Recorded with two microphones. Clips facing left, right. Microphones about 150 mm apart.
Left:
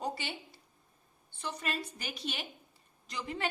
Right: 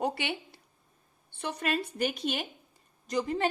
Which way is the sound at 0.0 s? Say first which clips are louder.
Right 6 dB; 65° right (ahead or behind).